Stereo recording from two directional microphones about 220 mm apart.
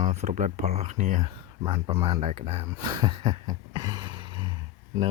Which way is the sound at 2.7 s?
20° right (ahead or behind).